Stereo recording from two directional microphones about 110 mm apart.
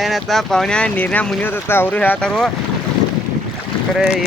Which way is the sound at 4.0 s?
5° right (ahead or behind).